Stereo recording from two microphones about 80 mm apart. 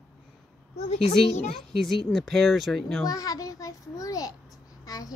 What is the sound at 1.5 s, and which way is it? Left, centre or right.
Speech, centre.